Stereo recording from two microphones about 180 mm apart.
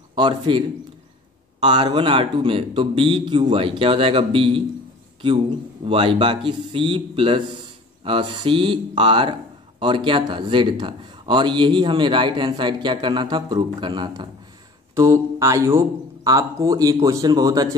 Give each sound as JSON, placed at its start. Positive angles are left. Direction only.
{"t": 0.1, "sound": "a man's voice", "side_deg": -25}
{"t": 15.0, "sound": "mantra", "side_deg": -15}
{"t": 16.3, "sound": "speech", "side_deg": -20}